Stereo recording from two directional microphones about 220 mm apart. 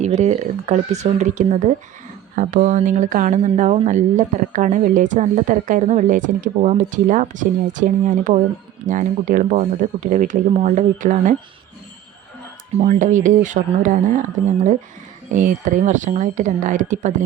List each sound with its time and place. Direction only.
0.0 s a woman's voice: 30° right (ahead or behind)
12.8 s a woman's voice: 35° right (ahead or behind)